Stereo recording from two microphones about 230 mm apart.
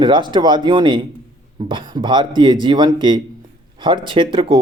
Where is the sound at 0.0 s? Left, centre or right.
Centre.